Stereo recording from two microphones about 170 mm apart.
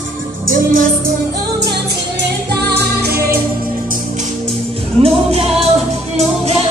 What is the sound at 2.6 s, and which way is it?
Music, 70° right (ahead or behind).